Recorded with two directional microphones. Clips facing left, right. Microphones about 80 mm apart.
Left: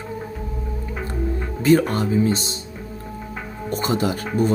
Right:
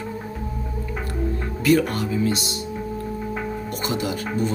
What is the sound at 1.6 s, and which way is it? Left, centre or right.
Speech, left.